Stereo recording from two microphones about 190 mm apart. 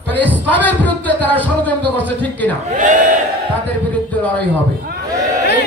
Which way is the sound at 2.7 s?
40° right (ahead or behind).